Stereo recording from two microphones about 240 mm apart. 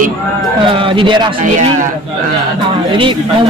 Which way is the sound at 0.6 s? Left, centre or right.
Right.